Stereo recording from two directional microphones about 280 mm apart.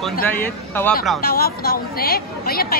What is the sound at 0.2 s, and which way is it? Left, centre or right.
Speech, centre.